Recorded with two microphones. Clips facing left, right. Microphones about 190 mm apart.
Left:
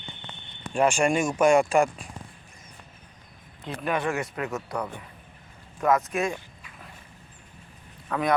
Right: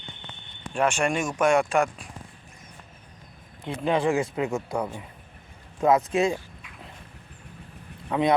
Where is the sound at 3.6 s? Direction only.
20° right (ahead or behind).